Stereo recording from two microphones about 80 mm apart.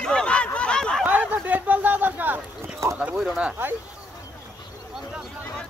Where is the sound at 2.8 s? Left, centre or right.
Right.